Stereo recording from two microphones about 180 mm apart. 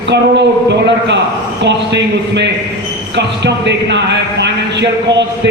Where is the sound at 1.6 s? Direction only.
75° right (ahead or behind).